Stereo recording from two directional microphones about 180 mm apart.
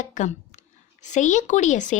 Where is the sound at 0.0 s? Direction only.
45° left (ahead or behind).